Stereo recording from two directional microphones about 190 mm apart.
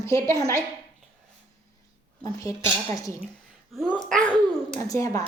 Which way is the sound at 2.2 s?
20° left (ahead or behind).